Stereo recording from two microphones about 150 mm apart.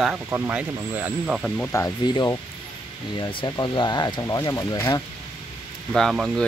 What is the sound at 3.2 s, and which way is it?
Speech, 30° left (ahead or behind).